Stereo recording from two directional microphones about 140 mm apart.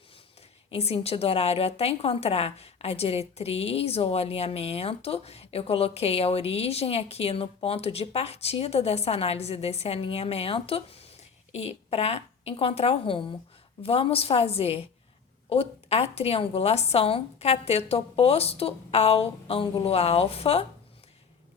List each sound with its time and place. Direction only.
0.7 s a woman's voice: 45° left (ahead or behind)